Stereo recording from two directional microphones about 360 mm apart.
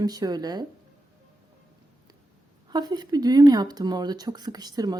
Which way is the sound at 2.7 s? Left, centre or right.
Centre.